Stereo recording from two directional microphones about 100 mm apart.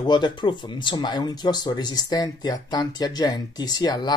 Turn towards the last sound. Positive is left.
turn(degrees=40)  # may be behind; listen again after turning